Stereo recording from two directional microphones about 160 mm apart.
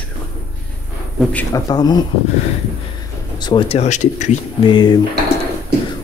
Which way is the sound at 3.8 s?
50° left (ahead or behind).